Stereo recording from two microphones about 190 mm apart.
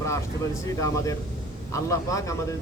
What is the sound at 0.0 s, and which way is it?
Speech, 15° left (ahead or behind).